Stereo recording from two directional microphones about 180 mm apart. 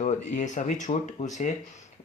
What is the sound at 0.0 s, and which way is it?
Speech, 40° left (ahead or behind).